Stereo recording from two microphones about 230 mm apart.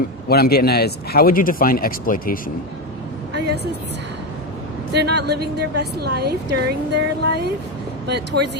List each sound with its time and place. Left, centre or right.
0.3 s speech: left
3.3 s vehicle: right
4.9 s a woman's voice: right